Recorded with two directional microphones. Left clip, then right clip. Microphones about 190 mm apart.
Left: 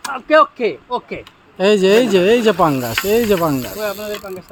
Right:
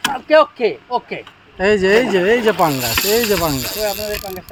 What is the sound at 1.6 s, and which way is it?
Speech, 35° left (ahead or behind).